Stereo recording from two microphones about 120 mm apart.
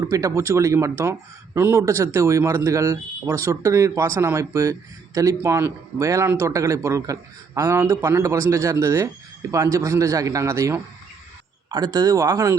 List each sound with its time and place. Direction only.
0.0 s speech: 25° right (ahead or behind)